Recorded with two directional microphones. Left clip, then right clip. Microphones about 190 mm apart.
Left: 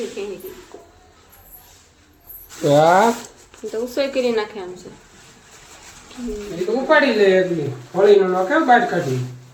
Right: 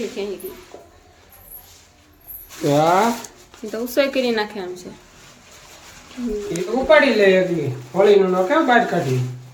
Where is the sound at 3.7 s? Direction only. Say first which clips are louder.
Right 2 dB; 25° right (ahead or behind).